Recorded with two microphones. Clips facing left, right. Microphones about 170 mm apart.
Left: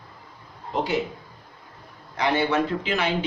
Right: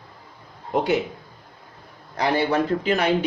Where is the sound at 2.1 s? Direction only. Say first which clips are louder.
Right 1 dB; 35° right (ahead or behind).